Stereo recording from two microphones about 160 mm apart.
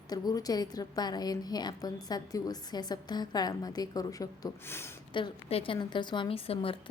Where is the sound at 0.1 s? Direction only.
25° left (ahead or behind).